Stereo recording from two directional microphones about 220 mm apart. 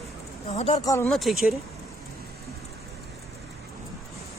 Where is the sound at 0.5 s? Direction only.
25° left (ahead or behind).